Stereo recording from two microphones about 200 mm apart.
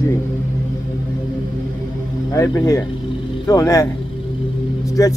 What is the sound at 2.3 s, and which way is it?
Speech, 15° left (ahead or behind).